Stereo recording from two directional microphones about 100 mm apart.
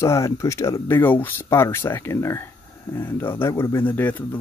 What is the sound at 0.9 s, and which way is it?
Speech, 20° left (ahead or behind).